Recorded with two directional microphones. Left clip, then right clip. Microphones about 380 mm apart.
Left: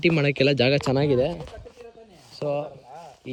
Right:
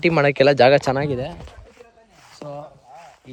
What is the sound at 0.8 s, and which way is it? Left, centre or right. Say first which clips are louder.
Speech: right 2 dB; centre.